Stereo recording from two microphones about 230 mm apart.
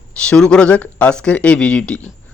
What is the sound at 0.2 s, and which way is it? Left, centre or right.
A man's voice, centre.